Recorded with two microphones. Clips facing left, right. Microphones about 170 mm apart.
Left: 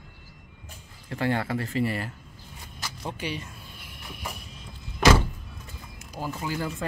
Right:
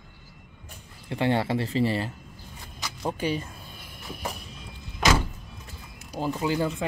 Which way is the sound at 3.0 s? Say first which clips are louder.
Right 6 dB; 45° right (ahead or behind).